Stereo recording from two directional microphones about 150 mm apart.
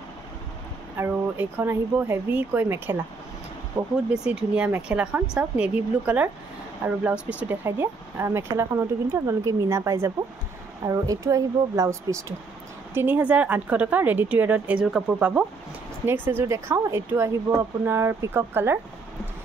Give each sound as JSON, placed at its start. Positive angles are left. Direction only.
{"t": 0.9, "sound": "speech", "side_deg": -15}
{"t": 3.8, "sound": "speech", "side_deg": -30}
{"t": 4.1, "sound": "speech", "side_deg": -5}